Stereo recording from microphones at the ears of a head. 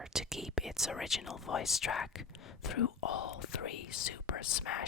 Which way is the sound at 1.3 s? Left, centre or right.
Left.